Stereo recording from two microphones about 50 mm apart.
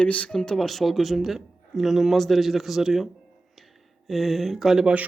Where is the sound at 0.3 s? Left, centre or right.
Centre.